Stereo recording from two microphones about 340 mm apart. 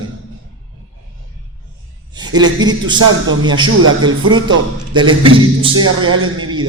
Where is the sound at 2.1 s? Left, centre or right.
Centre.